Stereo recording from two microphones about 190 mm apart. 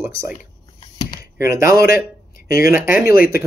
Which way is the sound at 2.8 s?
15° right (ahead or behind).